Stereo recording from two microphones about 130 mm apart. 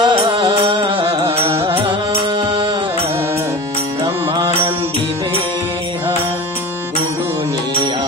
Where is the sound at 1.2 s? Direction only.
20° right (ahead or behind).